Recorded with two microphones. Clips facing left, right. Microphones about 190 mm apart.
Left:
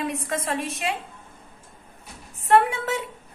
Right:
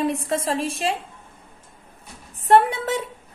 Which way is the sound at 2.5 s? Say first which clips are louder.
Right 2 dB; 35° right (ahead or behind).